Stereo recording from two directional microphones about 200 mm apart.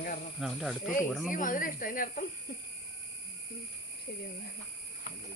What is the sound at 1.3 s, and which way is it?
Speech, 40° left (ahead or behind).